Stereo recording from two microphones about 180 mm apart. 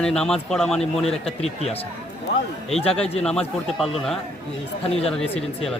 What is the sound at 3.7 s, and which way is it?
Speech, centre (ahead or behind).